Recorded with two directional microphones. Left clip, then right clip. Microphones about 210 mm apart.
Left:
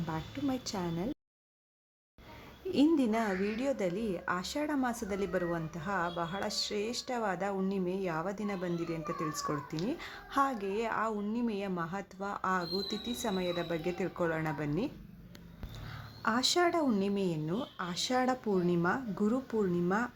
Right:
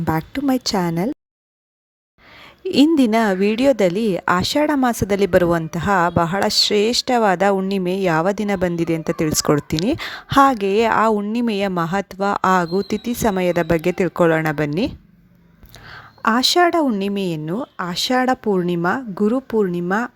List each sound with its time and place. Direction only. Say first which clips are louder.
0.0 s a woman's voice: right 16 dB; 50° right (ahead or behind)
2.6 s a woman's voice: right 13 dB; 45° right (ahead or behind)